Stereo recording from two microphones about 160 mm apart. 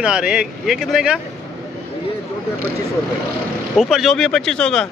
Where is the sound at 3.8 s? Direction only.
Centre (ahead or behind).